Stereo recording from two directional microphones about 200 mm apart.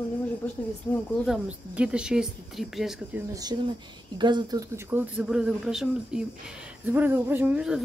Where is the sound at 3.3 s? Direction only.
20° right (ahead or behind).